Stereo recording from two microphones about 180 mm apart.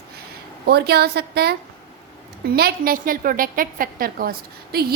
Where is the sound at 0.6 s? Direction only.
65° right (ahead or behind).